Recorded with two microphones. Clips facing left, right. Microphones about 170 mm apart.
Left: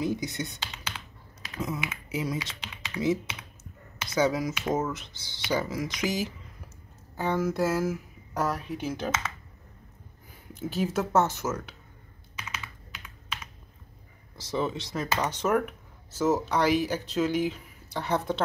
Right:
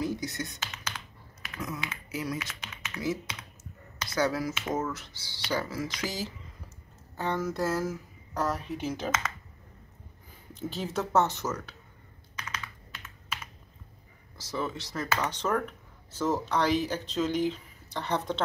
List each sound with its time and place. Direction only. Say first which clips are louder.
0.0 s speech: left 2 dB; 20° left (ahead or behind)
1.6 s speech: left 4 dB; 25° left (ahead or behind)
7.2 s speech: left 3 dB; 5° left (ahead or behind)
10.5 s speech: left 4 dB; 5° left (ahead or behind)
12.4 s computer keyboard: even; 10° left (ahead or behind)
12.9 s computer keyboard: even; 5° right (ahead or behind)
14.3 s speech: left 4 dB; 20° left (ahead or behind); by 18.4 s 5° left (ahead or behind)